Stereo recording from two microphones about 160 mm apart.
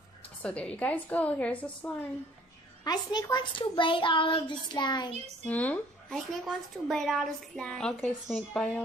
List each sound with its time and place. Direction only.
0.4 s a woman's voice: 10° left (ahead or behind)
2.8 s a child's voice: 25° left (ahead or behind)
5.5 s a woman's voice: 10° left (ahead or behind)